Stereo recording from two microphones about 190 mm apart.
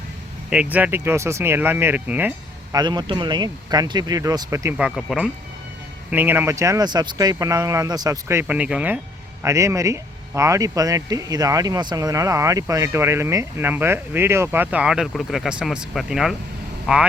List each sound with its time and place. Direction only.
0.5 s speech: 5° right (ahead or behind)
2.7 s speech: 20° right (ahead or behind)
4.8 s speech: centre (ahead or behind)